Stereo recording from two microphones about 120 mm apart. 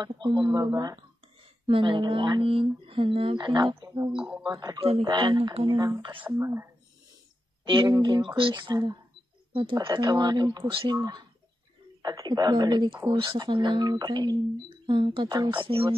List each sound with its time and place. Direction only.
0.0 s speech: 40° right (ahead or behind)
4.2 s speech: 10° right (ahead or behind)
4.5 s speech: 30° right (ahead or behind)
4.7 s speech: 50° right (ahead or behind)
5.0 s speech: 40° right (ahead or behind); by 6.7 s 20° right (ahead or behind)
7.6 s speech: 45° right (ahead or behind)
9.5 s speech: 50° right (ahead or behind)
9.8 s speech: 30° right (ahead or behind); by 15.9 s 45° right (ahead or behind)